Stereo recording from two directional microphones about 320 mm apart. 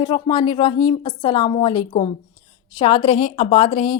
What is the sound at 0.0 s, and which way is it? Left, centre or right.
A woman's voice, centre.